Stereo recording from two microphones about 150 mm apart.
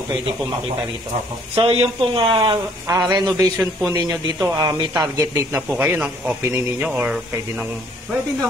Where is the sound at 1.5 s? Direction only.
40° right (ahead or behind); by 7.8 s 10° right (ahead or behind).